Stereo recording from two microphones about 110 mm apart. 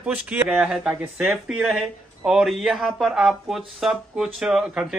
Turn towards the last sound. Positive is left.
turn(degrees=-5)  # may be behind; listen again after turning